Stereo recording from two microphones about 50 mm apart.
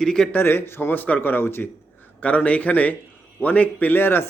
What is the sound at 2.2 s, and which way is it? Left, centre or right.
A man's voice, left.